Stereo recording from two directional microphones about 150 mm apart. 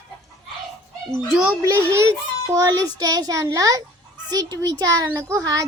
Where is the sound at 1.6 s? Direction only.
20° right (ahead or behind).